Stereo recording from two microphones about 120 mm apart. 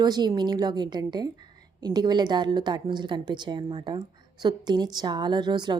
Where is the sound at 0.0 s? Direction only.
35° right (ahead or behind).